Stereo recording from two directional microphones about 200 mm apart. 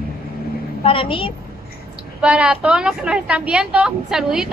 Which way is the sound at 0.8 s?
25° left (ahead or behind).